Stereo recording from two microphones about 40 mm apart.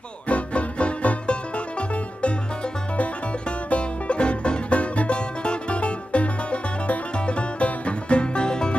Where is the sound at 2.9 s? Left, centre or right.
Left.